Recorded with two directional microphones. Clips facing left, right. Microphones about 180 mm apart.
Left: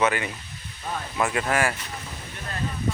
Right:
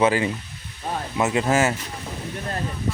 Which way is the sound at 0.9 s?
25° right (ahead or behind).